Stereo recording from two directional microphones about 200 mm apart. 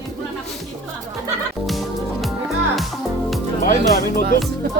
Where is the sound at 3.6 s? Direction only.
45° left (ahead or behind).